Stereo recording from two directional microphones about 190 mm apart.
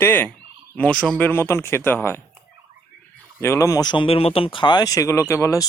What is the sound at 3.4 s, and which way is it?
Speech, 15° left (ahead or behind).